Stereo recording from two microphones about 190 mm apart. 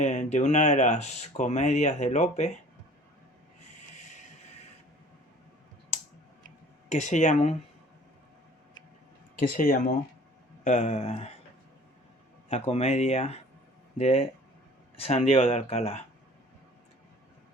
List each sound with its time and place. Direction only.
0.0 s speech: 40° left (ahead or behind)
6.8 s speech: 40° left (ahead or behind)
9.4 s speech: 50° left (ahead or behind); by 11.3 s 35° left (ahead or behind)
12.5 s speech: 35° left (ahead or behind)